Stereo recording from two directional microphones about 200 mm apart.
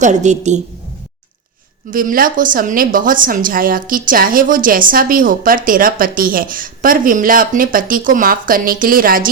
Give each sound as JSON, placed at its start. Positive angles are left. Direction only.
{"t": 0.0, "sound": "a woman's voice", "side_deg": -35}
{"t": 1.9, "sound": "a woman's voice", "side_deg": -45}